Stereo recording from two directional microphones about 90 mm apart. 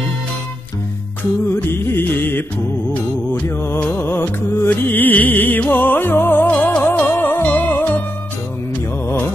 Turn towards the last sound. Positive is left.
turn(degrees=20)  # may be behind; listen again after turning